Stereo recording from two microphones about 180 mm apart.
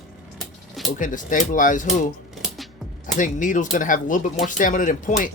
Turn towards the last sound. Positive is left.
turn(degrees=45)  # may be behind; listen again after turning